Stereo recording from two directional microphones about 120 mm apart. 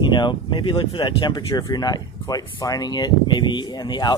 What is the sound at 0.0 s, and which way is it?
Speech, 40° left (ahead or behind).